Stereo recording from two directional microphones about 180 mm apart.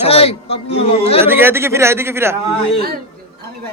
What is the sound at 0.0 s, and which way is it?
A man's voice, 35° left (ahead or behind).